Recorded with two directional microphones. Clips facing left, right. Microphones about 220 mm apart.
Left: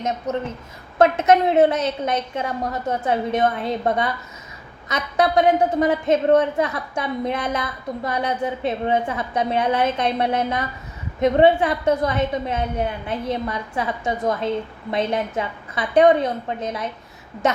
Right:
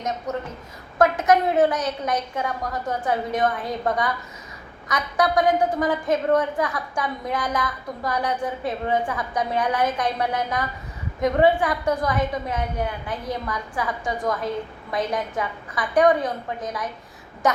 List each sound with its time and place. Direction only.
0.9 s a woman's voice: 25° left (ahead or behind)